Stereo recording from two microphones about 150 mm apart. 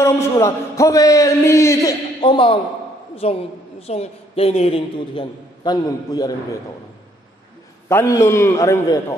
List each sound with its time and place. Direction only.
0.0 s a man's voice: 20° left (ahead or behind)
7.9 s a man's voice: 15° left (ahead or behind)